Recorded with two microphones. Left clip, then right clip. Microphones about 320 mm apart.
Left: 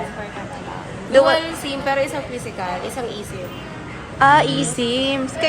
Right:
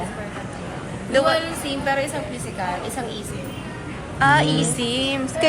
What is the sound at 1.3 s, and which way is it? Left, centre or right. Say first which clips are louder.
Speech: left 2 dB; left.